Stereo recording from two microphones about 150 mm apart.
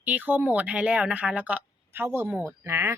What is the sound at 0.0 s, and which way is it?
A woman's voice, 10° right (ahead or behind).